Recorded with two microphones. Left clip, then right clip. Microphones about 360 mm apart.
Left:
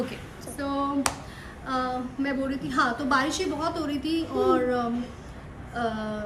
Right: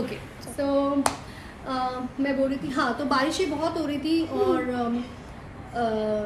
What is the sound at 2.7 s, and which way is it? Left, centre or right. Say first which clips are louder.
A woman's voice: left 2 dB; centre.